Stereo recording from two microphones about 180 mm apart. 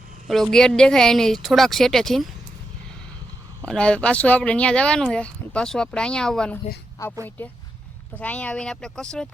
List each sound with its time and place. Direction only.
0.3 s speech: centre (ahead or behind)
3.7 s speech: 5° left (ahead or behind)
7.0 s speech: 15° left (ahead or behind)